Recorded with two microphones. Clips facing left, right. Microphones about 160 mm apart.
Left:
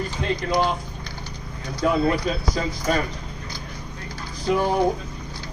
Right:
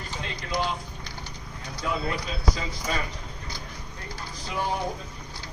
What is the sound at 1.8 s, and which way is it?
A man's voice, 55° left (ahead or behind).